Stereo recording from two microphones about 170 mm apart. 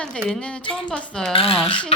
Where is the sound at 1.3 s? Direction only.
35° left (ahead or behind).